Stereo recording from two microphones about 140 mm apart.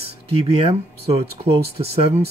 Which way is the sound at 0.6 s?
45° right (ahead or behind).